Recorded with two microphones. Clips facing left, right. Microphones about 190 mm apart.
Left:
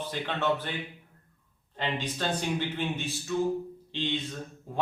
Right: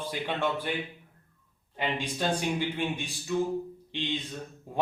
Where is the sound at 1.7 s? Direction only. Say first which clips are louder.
Right 1 dB; 10° right (ahead or behind).